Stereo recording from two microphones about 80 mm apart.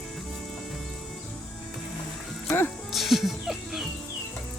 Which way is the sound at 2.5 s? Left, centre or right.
Left.